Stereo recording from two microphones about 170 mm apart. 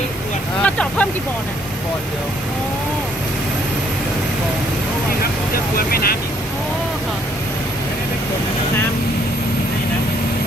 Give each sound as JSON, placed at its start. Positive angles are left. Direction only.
{"t": 0.6, "sound": "speech", "side_deg": 5}
{"t": 5.7, "sound": "speech", "side_deg": 60}